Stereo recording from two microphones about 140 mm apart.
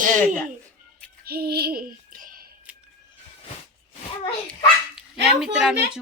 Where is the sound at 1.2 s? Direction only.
90° right.